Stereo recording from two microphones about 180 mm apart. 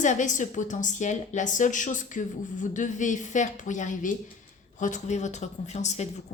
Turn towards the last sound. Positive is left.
turn(degrees=40)  # may be behind; listen again after turning